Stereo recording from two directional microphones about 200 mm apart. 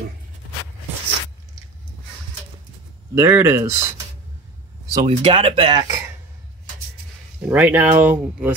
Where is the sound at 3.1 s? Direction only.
15° right (ahead or behind).